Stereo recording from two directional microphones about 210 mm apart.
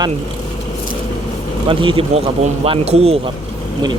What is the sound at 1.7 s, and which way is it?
Speech, 25° right (ahead or behind).